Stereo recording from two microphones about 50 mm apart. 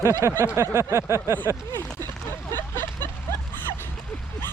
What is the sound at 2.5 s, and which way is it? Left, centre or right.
Vehicle, left.